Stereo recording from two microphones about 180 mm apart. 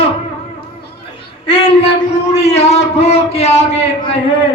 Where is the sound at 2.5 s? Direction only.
35° left (ahead or behind).